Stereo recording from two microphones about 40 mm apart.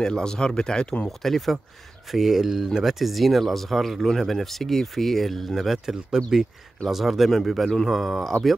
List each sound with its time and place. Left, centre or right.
0.0 s speech: centre
1.0 s speech: centre
2.0 s speech: centre